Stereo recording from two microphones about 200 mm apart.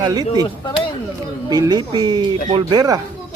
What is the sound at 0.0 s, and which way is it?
Speech, 20° right (ahead or behind).